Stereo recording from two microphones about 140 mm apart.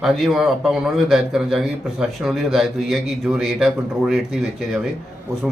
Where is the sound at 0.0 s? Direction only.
Centre (ahead or behind).